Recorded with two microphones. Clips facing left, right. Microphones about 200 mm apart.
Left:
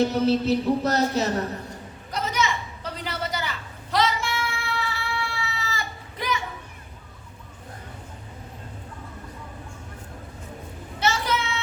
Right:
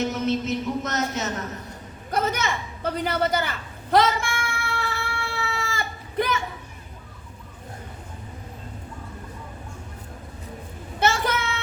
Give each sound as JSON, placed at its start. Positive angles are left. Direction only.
{"t": 0.0, "sound": "speech", "side_deg": 35}
{"t": 2.0, "sound": "a woman's voice", "side_deg": -55}
{"t": 3.9, "sound": "child singing", "side_deg": -50}
{"t": 11.0, "sound": "a sound", "side_deg": -50}